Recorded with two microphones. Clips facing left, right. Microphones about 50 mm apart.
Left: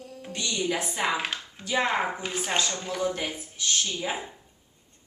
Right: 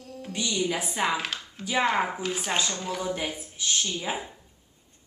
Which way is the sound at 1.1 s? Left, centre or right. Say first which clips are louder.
Even; centre.